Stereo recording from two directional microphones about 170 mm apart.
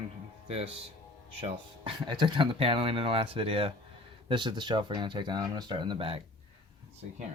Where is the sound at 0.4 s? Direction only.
35° right (ahead or behind).